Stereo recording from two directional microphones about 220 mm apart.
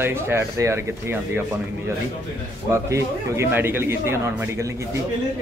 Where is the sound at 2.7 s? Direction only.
10° right (ahead or behind).